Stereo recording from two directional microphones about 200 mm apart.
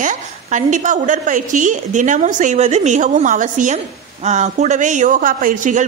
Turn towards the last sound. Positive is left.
turn(degrees=-40)  # may be behind; listen again after turning